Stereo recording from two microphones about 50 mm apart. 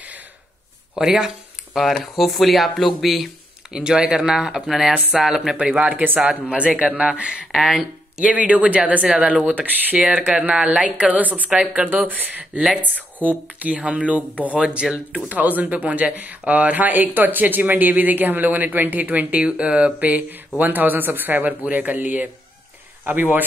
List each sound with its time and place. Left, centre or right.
0.9 s speech: centre
1.7 s speech: centre
3.7 s speech: centre
5.6 s speech: right
7.5 s speech: centre
8.2 s speech: right
9.1 s speech: centre
9.4 s speech: right
9.9 s speech: centre
15.2 s speech: right
19.4 s speech: right